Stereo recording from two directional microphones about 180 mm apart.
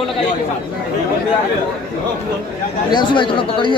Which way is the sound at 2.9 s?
25° left (ahead or behind).